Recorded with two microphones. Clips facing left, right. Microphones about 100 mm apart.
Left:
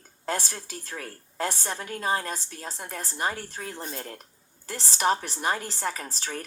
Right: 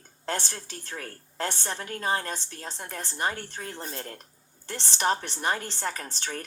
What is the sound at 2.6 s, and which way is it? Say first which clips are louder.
A woman's voice: left 1 dB; 5° left (ahead or behind).